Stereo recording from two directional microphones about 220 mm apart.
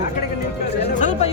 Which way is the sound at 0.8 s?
30° left (ahead or behind).